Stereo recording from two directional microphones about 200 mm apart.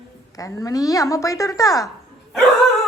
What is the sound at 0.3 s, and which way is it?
Speech, 15° left (ahead or behind).